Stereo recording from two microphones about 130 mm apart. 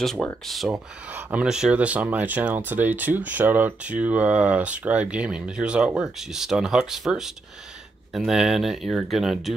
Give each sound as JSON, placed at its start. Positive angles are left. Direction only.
{"t": 0.0, "sound": "speech", "side_deg": 0}
{"t": 0.7, "sound": "speech", "side_deg": -10}